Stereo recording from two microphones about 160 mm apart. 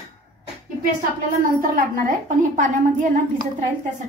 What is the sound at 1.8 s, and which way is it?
A woman's voice, 60° right (ahead or behind).